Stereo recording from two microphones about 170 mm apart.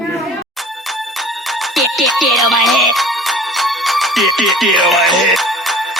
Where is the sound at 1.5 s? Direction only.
Centre (ahead or behind).